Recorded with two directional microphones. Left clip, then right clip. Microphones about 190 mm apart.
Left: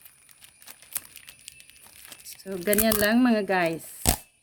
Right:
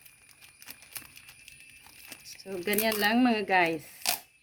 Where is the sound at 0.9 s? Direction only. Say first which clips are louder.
Left 8 dB; 15° left (ahead or behind).